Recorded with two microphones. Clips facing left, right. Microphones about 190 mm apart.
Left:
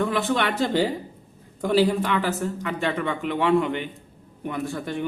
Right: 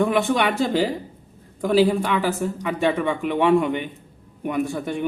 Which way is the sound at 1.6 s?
10° right (ahead or behind).